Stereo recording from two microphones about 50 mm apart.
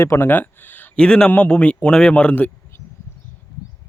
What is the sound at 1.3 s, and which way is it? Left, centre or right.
Speech, left.